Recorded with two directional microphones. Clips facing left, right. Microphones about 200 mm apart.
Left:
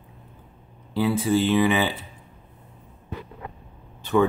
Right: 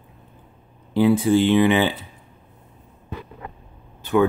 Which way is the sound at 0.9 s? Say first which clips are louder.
Right 5 dB; 15° right (ahead or behind).